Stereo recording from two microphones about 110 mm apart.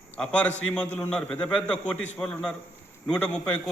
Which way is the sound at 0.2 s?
10° left (ahead or behind).